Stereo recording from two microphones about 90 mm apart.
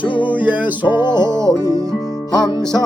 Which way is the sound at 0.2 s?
20° right (ahead or behind).